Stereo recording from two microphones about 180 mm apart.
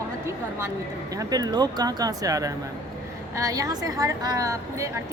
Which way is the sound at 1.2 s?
20° right (ahead or behind).